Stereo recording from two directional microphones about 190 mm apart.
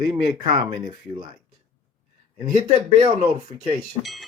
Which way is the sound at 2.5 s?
30° right (ahead or behind).